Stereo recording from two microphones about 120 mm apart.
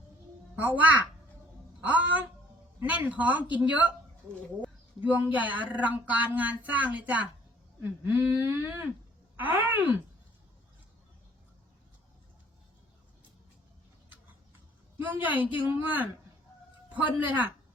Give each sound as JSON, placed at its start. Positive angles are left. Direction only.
{"t": 0.5, "sound": "speech", "side_deg": -15}
{"t": 4.9, "sound": "speech", "side_deg": -15}
{"t": 15.0, "sound": "speech", "side_deg": -15}